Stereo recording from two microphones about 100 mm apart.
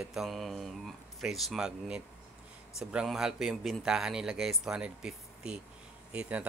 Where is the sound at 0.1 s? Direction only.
Centre (ahead or behind).